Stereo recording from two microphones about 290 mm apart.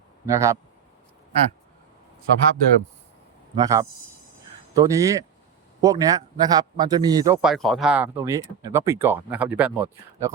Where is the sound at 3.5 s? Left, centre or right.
Centre.